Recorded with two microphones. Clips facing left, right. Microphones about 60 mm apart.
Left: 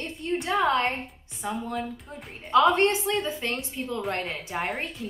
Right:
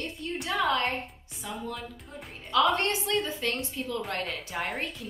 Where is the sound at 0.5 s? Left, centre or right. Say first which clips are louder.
Left 3 dB; left.